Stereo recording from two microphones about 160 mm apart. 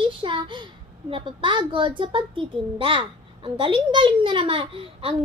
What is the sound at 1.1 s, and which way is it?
A child's voice, 30° right (ahead or behind).